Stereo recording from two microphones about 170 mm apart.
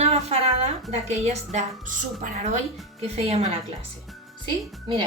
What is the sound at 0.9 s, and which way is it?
A woman's voice, 40° right (ahead or behind).